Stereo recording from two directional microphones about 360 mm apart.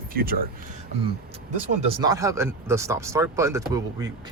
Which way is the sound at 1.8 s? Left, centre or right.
Centre.